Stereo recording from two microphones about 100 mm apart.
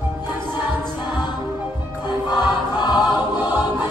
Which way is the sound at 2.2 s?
45° left (ahead or behind).